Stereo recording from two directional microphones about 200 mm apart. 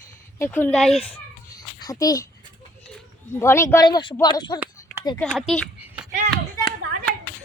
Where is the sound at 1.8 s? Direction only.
20° left (ahead or behind).